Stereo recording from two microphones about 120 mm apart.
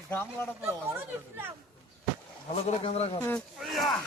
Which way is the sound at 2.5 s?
60° left (ahead or behind).